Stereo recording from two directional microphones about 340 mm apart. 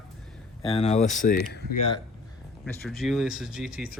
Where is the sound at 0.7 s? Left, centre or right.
Centre.